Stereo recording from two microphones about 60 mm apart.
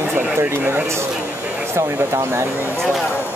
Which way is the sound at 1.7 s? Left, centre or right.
Right.